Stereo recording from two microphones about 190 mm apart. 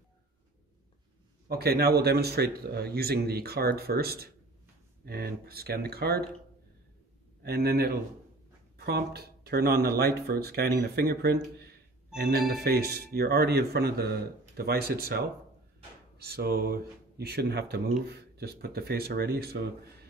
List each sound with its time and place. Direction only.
1.5 s speech: 55° right (ahead or behind)
7.4 s speech: 55° right (ahead or behind)